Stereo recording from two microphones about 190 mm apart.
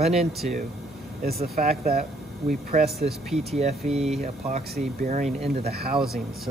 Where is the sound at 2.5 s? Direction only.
45° right (ahead or behind).